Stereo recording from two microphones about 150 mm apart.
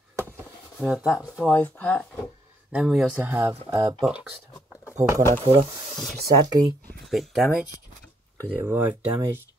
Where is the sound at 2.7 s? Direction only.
5° right (ahead or behind).